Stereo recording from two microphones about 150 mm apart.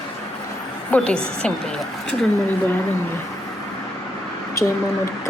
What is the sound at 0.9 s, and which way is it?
Speech, 10° left (ahead or behind).